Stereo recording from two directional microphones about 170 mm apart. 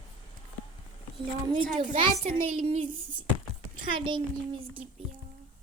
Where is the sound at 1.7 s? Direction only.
30° right (ahead or behind).